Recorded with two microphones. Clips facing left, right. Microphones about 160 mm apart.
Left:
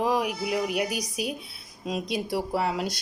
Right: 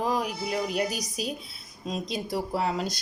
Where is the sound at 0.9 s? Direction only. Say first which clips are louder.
Left 2 dB; 60° left (ahead or behind).